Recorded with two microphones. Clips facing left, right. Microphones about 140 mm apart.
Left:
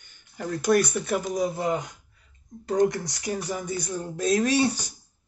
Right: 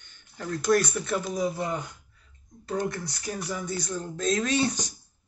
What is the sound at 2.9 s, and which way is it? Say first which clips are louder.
Speech: left 4 dB; 20° left (ahead or behind).